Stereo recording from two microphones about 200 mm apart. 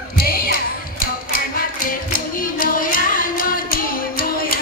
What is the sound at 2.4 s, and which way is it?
Music, 45° left (ahead or behind).